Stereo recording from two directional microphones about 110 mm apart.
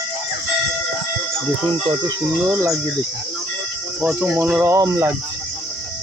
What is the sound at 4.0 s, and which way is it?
Speech, 10° right (ahead or behind).